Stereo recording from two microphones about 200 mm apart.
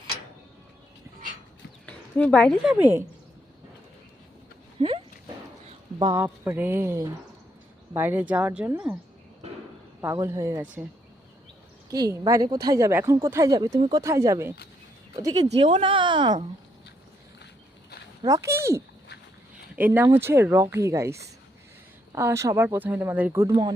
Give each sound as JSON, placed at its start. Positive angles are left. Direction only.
{"t": 1.9, "sound": "speech", "side_deg": 5}
{"t": 4.8, "sound": "a sound", "side_deg": -30}
{"t": 6.1, "sound": "speech", "side_deg": -10}
{"t": 10.0, "sound": "speech", "side_deg": -15}
{"t": 11.9, "sound": "speech", "side_deg": -20}
{"t": 15.5, "sound": "speech", "side_deg": -30}
{"t": 18.2, "sound": "speech", "side_deg": -15}